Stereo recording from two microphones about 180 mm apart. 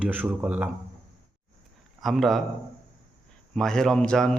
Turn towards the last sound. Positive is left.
turn(degrees=5)  # may be behind; listen again after turning